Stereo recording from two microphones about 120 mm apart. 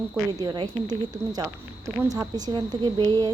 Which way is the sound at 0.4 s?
40° right (ahead or behind).